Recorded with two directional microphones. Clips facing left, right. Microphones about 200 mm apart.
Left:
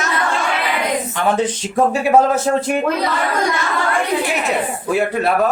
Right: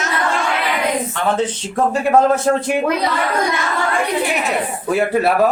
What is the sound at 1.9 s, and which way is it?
Speech, 5° left (ahead or behind).